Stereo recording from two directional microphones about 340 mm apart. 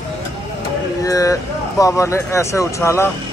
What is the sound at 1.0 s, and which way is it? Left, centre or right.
Speech, centre.